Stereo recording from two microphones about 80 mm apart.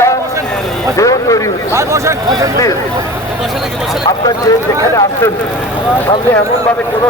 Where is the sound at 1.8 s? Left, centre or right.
Right.